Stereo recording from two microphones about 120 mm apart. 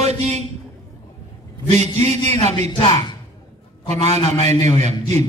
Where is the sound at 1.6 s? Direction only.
65° right (ahead or behind).